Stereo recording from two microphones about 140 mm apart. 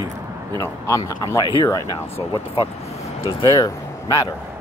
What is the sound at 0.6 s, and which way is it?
Speech, 20° left (ahead or behind).